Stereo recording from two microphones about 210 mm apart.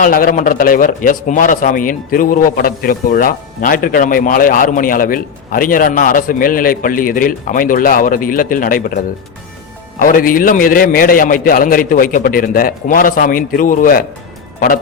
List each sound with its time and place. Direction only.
0.0 s a man's voice: 40° left (ahead or behind)
10.0 s a man's voice: 40° left (ahead or behind)